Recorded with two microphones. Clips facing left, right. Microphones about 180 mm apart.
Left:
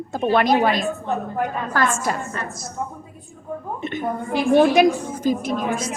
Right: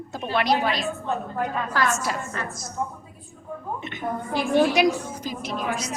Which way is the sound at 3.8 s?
50° left (ahead or behind).